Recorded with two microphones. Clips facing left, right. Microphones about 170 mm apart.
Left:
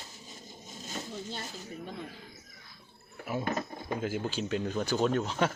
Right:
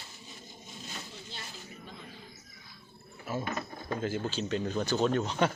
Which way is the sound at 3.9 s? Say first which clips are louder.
Right 1 dB; 10° left (ahead or behind).